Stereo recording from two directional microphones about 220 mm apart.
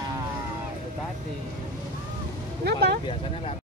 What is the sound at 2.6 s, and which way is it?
Speech, 50° right (ahead or behind).